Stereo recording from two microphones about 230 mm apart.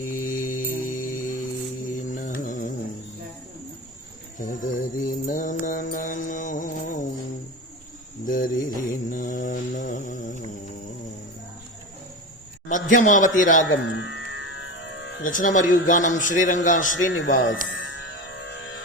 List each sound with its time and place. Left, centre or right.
0.2 s music: left
0.9 s mantra: left
4.4 s mantra: left
8.2 s mantra: left
12.6 s a man's voice: left
13.6 s music: left
15.2 s speech: left
17.1 s speech: left
17.7 s music: left